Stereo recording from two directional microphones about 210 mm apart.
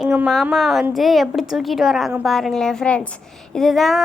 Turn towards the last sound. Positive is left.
turn(degrees=0)  # may be behind; listen again after turning